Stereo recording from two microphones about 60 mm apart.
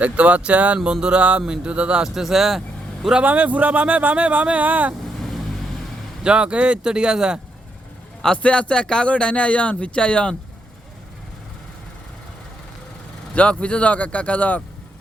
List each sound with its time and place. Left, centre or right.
0.0 s speech: right
2.0 s speech: centre
3.2 s speech: right
5.2 s vehicle: centre
6.2 s speech: centre
8.4 s speech: centre
13.3 s speech: left